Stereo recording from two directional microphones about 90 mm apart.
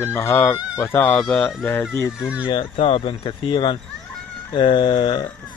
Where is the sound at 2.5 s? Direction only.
75° left (ahead or behind).